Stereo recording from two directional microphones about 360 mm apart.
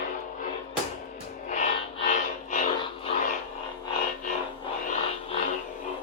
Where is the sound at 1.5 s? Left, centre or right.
Centre.